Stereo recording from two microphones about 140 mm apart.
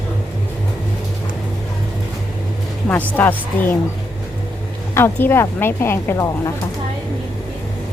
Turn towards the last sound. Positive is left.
turn(degrees=20)  # may be behind; listen again after turning